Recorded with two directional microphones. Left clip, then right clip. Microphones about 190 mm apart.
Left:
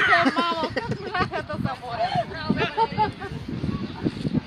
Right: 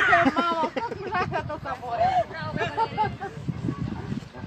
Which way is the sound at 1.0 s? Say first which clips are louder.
Left 1 dB; 10° left (ahead or behind).